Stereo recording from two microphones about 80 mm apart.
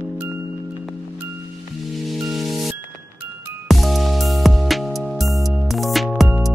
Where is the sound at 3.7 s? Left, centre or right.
Centre.